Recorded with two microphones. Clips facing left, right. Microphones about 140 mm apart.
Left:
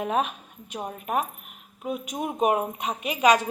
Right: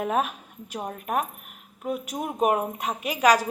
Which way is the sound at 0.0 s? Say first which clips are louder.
Even; 5° right (ahead or behind).